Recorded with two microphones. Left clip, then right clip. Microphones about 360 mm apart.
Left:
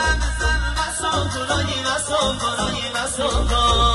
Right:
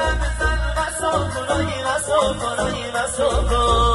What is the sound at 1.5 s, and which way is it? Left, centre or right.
Music, centre.